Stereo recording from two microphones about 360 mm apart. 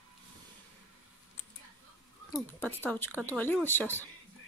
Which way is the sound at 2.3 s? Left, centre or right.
Centre.